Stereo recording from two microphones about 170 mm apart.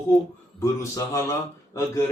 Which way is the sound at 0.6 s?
20° left (ahead or behind).